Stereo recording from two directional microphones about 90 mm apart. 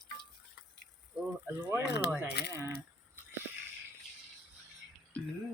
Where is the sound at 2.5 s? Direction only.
35° right (ahead or behind).